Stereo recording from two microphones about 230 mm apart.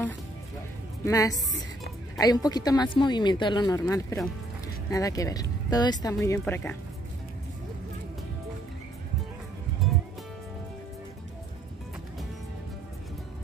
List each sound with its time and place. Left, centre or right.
1.0 s a woman's voice: centre
9.8 s music: centre